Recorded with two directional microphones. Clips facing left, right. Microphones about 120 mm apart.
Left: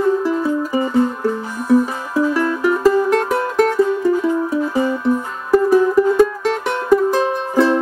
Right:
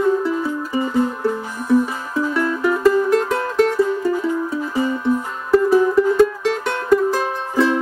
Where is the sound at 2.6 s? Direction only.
10° left (ahead or behind).